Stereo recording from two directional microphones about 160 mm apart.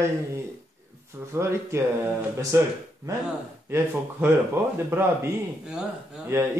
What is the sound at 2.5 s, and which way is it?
A man's voice, 20° right (ahead or behind).